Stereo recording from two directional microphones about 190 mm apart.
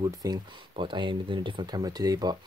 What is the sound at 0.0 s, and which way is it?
Speech, 20° right (ahead or behind).